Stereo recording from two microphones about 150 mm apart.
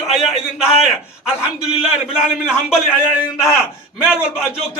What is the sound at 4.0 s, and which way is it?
Speech, 5° right (ahead or behind).